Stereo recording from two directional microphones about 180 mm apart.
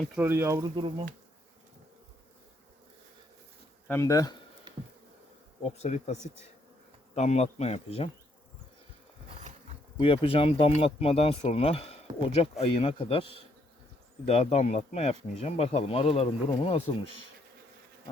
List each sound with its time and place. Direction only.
0.2 s speech: 15° right (ahead or behind)
0.8 s speech: 30° right (ahead or behind)
3.8 s speech: 15° left (ahead or behind)
4.7 s insect: 25° right (ahead or behind)
5.7 s speech: 40° left (ahead or behind)
7.2 s speech: 40° left (ahead or behind)
10.0 s speech: 30° left (ahead or behind)